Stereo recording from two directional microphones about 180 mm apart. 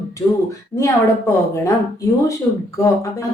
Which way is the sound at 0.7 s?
15° left (ahead or behind).